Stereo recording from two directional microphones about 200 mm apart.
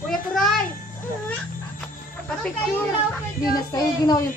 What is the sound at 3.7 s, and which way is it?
Speech, 20° left (ahead or behind).